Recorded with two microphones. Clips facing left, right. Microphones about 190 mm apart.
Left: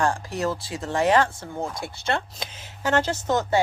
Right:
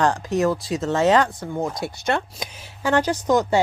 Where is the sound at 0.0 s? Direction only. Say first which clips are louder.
Right 5 dB; 20° right (ahead or behind).